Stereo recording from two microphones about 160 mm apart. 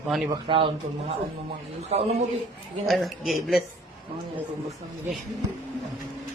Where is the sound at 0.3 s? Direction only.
30° right (ahead or behind).